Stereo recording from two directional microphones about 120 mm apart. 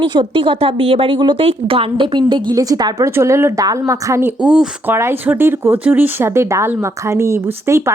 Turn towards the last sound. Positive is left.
turn(degrees=-25)  # may be behind; listen again after turning